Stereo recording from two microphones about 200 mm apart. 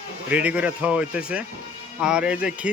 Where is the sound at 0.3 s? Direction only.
5° right (ahead or behind).